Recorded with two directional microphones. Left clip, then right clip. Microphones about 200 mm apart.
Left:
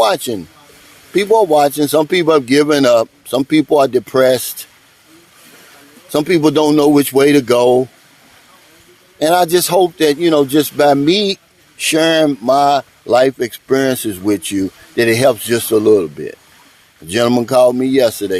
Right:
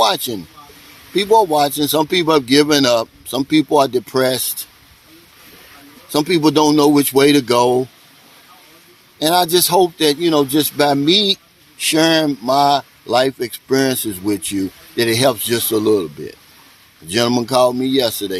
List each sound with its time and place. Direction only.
0.0 s a man's voice: 35° left (ahead or behind)
6.1 s a man's voice: 40° left (ahead or behind)
9.1 s a man's voice: 40° left (ahead or behind)